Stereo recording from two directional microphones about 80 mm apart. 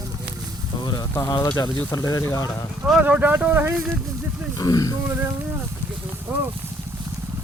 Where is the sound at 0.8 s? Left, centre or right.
Left.